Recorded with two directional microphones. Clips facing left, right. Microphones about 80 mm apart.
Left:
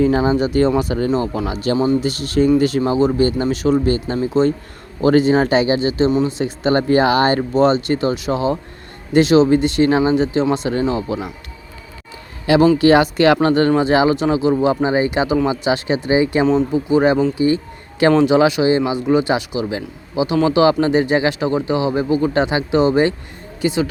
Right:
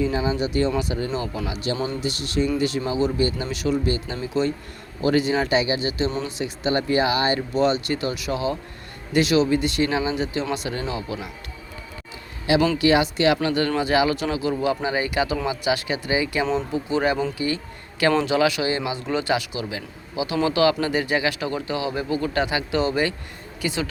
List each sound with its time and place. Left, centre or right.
0.0 s speech: left
12.5 s speech: left